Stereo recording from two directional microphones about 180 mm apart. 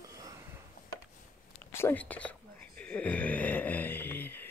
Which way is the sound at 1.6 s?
10° left (ahead or behind).